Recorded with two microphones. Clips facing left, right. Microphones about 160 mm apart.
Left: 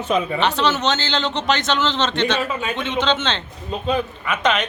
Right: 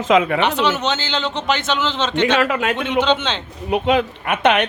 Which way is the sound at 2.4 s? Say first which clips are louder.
Right 5 dB; 85° right.